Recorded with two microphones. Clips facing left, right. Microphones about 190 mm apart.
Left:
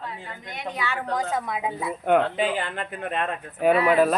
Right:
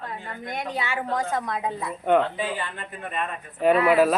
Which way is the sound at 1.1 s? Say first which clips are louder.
Even; centre (ahead or behind).